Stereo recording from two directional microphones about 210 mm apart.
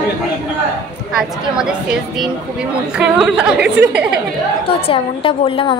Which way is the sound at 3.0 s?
5° right (ahead or behind).